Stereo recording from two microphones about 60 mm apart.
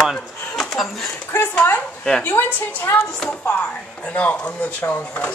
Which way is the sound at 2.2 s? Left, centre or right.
Left.